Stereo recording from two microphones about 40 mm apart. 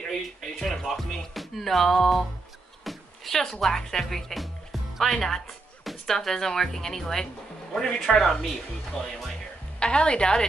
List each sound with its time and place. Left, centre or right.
0.6 s music: centre
2.8 s a sound: centre
3.3 s speech: centre
9.8 s a woman's voice: left